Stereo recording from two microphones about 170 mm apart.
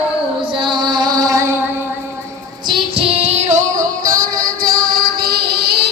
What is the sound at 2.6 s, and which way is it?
Music, 30° right (ahead or behind).